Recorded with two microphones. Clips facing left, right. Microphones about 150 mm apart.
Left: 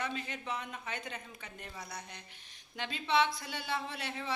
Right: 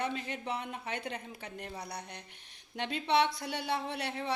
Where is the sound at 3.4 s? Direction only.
65° right (ahead or behind).